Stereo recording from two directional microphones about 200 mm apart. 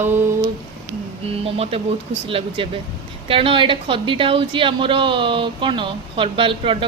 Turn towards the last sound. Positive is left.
turn(degrees=-25)  # may be behind; listen again after turning